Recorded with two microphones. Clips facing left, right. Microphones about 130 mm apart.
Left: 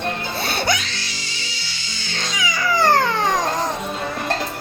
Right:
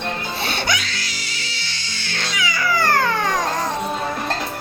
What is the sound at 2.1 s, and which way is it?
Cat, 20° left (ahead or behind).